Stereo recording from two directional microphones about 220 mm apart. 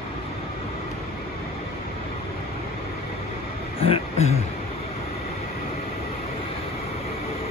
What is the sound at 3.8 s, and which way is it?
Speech, 25° left (ahead or behind).